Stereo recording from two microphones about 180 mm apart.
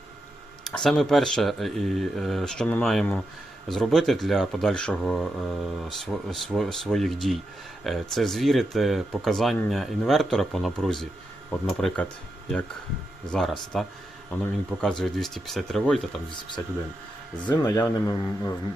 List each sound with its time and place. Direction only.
0.6 s speech: centre (ahead or behind)
13.3 s speech: centre (ahead or behind)
17.5 s speech: 20° left (ahead or behind)